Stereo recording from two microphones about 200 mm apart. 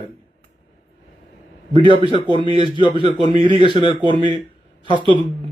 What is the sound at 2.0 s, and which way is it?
Speech, 25° right (ahead or behind).